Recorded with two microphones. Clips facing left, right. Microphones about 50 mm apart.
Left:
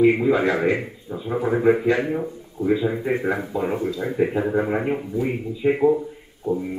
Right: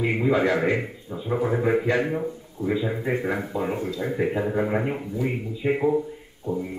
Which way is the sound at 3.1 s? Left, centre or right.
Centre.